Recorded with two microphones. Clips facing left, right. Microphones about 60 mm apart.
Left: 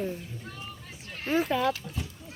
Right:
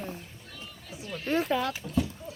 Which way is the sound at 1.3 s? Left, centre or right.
Centre.